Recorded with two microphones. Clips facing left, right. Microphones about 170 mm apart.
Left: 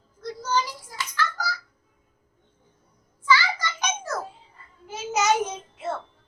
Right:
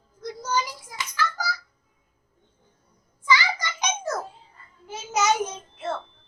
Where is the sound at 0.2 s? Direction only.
15° right (ahead or behind).